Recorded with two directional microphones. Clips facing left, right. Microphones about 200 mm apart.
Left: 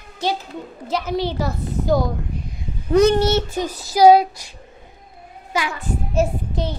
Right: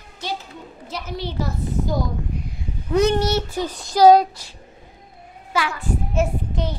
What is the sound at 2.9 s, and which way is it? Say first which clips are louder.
Speech: left 4 dB; 35° left (ahead or behind).